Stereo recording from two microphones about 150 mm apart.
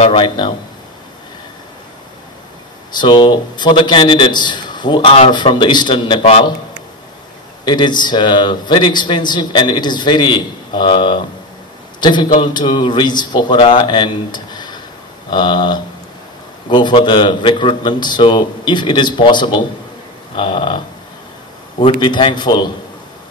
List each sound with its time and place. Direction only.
0.0 s a man's voice: 35° left (ahead or behind)
3.0 s a man's voice: 30° left (ahead or behind)
7.6 s a man's voice: 30° left (ahead or behind)
22.0 s a man's voice: 30° left (ahead or behind)